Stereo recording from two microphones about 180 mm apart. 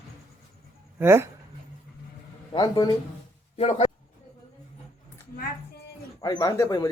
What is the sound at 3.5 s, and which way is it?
Speech, 35° left (ahead or behind).